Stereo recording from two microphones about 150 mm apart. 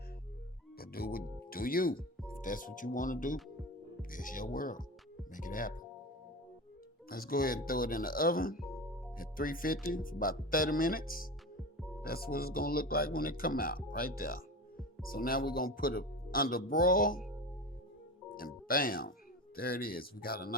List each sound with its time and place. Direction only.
0.8 s speech: 85° left; by 5.8 s 65° left (ahead or behind)
7.1 s speech: 75° left (ahead or behind)
12.0 s speech: 90° left; by 17.2 s 70° left (ahead or behind)
18.3 s speech: 70° left (ahead or behind)